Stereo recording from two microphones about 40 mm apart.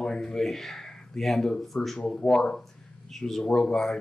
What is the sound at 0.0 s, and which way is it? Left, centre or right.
A man's voice, centre.